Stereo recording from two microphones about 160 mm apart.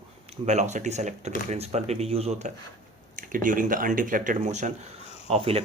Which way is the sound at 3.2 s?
55° right (ahead or behind).